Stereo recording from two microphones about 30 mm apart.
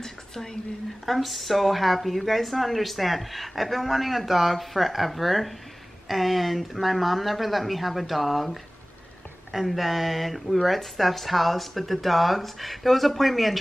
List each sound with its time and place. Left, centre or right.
0.0 s speech: centre
1.0 s a woman's voice: centre